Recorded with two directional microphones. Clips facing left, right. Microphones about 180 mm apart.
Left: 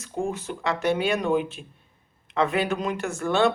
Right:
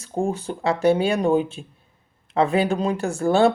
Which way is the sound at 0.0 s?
30° right (ahead or behind).